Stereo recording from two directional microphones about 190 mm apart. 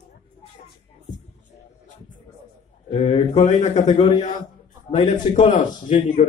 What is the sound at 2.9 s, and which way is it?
A man's voice, 30° left (ahead or behind).